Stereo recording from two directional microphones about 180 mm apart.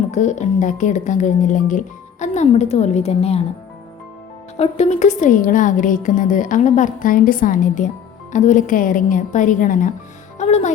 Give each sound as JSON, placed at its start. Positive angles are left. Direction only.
{"t": 0.1, "sound": "speech", "side_deg": 40}
{"t": 4.5, "sound": "a woman's voice", "side_deg": 35}